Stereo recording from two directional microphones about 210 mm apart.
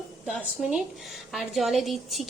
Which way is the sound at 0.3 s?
Centre (ahead or behind).